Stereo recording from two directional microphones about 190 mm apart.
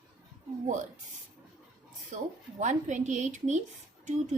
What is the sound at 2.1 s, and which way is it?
A woman's voice, 40° right (ahead or behind).